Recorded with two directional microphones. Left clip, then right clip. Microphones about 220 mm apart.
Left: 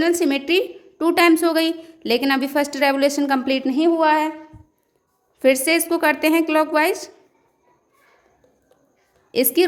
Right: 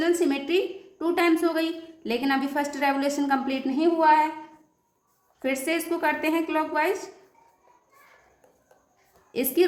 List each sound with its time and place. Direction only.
0.0 s a woman's voice: 45° left (ahead or behind)
5.4 s a woman's voice: 45° left (ahead or behind)
9.3 s a woman's voice: 45° left (ahead or behind)